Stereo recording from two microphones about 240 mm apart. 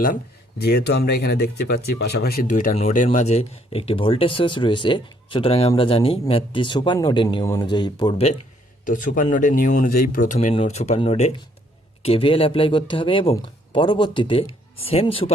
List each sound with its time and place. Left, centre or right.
0.6 s speech: left; by 8.3 s centre
8.8 s speech: left